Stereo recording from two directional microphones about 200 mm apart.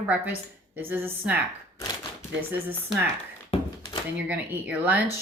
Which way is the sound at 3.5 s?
30° left (ahead or behind).